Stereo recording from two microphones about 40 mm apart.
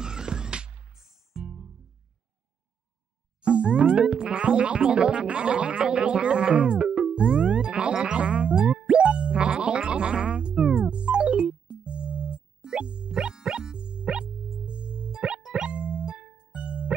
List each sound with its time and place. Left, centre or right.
0.0 s music: centre
0.9 s music: centre
3.4 s music: right
6.9 s music: centre